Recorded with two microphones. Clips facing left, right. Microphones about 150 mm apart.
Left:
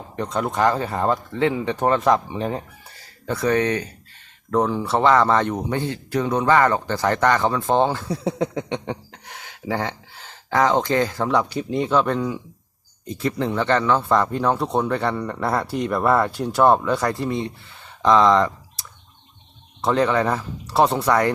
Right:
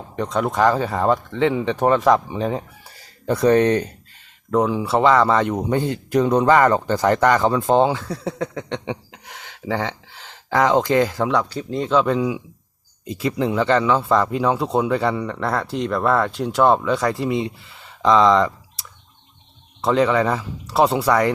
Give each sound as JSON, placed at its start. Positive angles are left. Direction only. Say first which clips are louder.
{"t": 0.2, "sound": "speech", "louder": "right 2 dB", "side_deg": 0}
{"t": 3.2, "sound": "speech", "louder": "right 5 dB", "side_deg": -20}
{"t": 4.5, "sound": "speech", "louder": "right 2 dB", "side_deg": -5}
{"t": 8.0, "sound": "speech", "louder": "left 2 dB", "side_deg": 15}
{"t": 8.8, "sound": "speech", "louder": "right 1 dB", "side_deg": -5}
{"t": 11.3, "sound": "speech", "louder": "even", "side_deg": 10}
{"t": 11.9, "sound": "speech", "louder": "right 4 dB", "side_deg": 0}